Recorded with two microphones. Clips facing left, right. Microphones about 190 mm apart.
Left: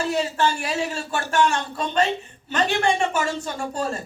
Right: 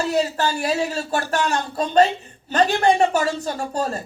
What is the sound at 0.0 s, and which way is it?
Speech, 40° right (ahead or behind).